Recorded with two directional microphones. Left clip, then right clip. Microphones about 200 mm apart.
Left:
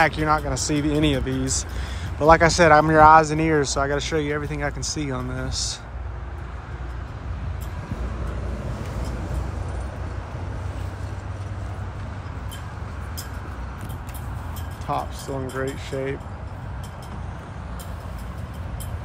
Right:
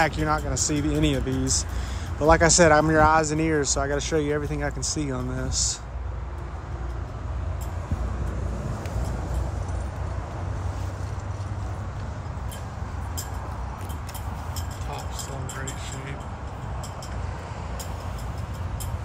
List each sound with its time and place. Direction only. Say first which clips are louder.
0.0 s speech: left 4 dB; 10° right (ahead or behind)
14.9 s vehicle: left 11 dB; 30° left (ahead or behind)